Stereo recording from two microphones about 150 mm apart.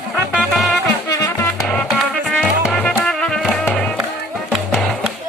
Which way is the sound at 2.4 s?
5° left (ahead or behind).